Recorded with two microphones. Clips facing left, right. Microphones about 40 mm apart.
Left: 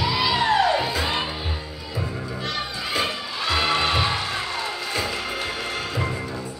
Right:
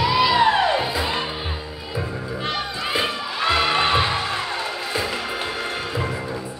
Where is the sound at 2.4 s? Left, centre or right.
Right.